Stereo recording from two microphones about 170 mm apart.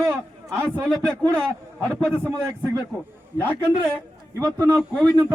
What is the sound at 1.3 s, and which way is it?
A man's voice, 5° left (ahead or behind).